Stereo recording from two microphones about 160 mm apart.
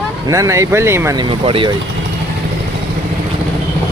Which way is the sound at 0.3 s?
20° right (ahead or behind).